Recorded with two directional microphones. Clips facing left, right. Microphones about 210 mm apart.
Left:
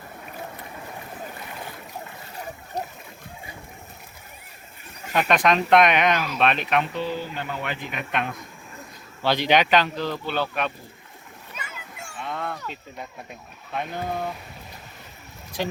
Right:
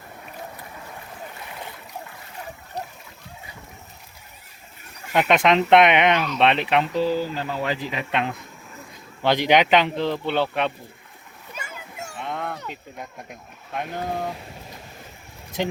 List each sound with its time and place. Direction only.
2.8 s splash: 45° left (ahead or behind)
5.1 s speech: 20° right (ahead or behind)
9.2 s speech: 20° right (ahead or behind)
12.2 s a sound: 15° right (ahead or behind)
13.7 s speech: 10° right (ahead or behind)
15.5 s speech: 20° right (ahead or behind)